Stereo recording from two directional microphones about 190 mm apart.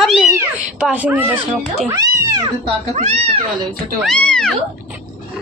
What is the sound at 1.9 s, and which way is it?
Speech, 20° right (ahead or behind).